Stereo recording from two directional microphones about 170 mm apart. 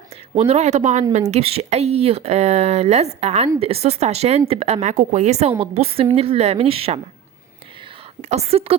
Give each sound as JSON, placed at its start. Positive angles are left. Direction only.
{"t": 0.3, "sound": "speech", "side_deg": -40}
{"t": 8.2, "sound": "speech", "side_deg": -40}